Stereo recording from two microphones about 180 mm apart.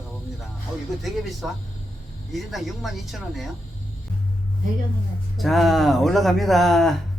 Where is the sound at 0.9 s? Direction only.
Centre (ahead or behind).